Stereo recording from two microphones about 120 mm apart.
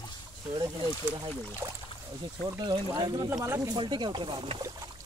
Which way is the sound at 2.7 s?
40° right (ahead or behind).